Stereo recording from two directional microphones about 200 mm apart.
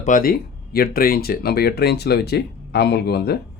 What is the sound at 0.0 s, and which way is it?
Speech, 45° left (ahead or behind).